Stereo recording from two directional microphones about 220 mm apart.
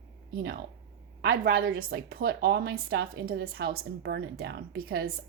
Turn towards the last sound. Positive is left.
turn(degrees=-45)  # may be behind; listen again after turning